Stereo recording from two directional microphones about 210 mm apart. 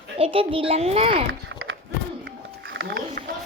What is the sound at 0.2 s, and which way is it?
A child's voice, 25° right (ahead or behind).